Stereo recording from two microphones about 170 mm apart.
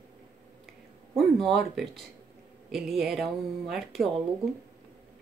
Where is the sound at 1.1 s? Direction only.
Centre (ahead or behind).